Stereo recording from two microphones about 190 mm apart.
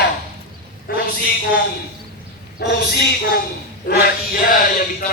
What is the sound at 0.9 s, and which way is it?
Speech, 50° left (ahead or behind).